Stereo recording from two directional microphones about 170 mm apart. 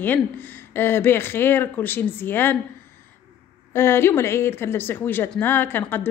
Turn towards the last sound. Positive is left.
turn(degrees=10)  # may be behind; listen again after turning